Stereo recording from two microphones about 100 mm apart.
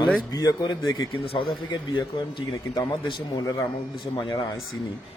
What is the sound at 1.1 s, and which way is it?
Speech, 65° left (ahead or behind).